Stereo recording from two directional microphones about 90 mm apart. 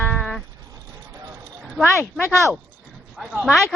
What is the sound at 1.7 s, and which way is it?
Speech, 5° left (ahead or behind).